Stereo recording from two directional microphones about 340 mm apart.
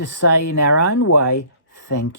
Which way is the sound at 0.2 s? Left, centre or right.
Left.